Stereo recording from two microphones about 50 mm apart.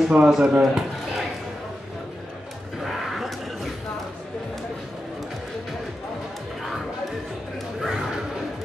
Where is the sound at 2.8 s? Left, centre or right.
Centre.